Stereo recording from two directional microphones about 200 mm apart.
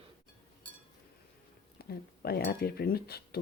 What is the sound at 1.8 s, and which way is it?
Speech, 50° left (ahead or behind).